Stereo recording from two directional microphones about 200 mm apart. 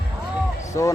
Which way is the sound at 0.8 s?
15° left (ahead or behind).